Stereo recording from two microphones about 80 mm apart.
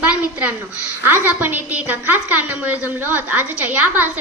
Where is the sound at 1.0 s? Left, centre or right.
Right.